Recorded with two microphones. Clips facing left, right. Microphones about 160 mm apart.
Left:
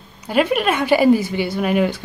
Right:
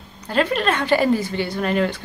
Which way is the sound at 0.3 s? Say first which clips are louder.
Left 3 dB; 10° left (ahead or behind).